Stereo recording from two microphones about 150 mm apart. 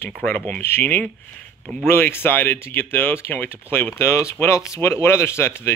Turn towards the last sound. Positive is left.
turn(degrees=15)  # may be behind; listen again after turning